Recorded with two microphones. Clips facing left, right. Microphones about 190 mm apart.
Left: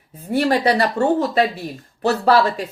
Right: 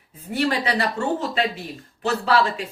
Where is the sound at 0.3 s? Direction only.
40° left (ahead or behind).